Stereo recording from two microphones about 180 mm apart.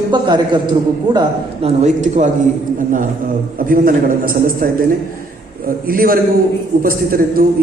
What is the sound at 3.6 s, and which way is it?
A man's voice, 50° right (ahead or behind).